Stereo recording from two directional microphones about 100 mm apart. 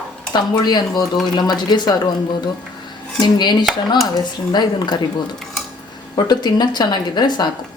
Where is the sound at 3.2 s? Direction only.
50° left (ahead or behind).